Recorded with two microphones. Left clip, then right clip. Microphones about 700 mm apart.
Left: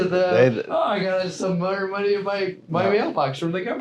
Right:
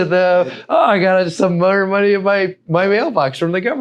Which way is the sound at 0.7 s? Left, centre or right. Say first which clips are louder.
Right 9 dB; right.